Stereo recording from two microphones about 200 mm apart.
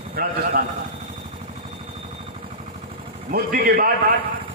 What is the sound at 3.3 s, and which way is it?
Speech, 50° right (ahead or behind).